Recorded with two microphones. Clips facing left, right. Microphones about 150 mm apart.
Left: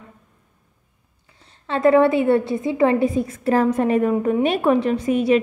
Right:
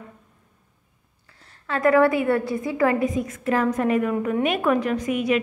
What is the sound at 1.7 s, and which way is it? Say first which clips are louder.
A woman's voice: left 3 dB; 25° left (ahead or behind).